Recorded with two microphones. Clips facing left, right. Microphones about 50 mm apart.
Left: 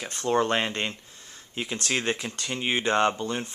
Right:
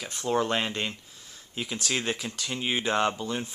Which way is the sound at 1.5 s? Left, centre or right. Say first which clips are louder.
Left 2 dB; centre.